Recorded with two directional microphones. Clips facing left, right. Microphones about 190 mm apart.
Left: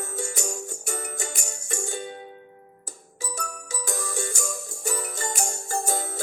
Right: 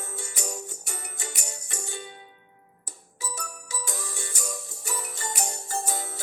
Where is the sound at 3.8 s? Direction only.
45° left (ahead or behind).